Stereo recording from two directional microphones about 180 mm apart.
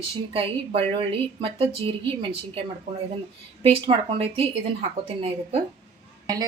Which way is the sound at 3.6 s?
30° right (ahead or behind).